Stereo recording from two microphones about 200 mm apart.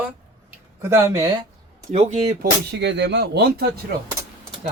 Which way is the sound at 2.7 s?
60° right (ahead or behind).